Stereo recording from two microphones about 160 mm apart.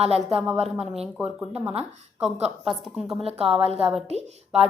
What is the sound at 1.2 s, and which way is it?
A woman's voice, 10° right (ahead or behind).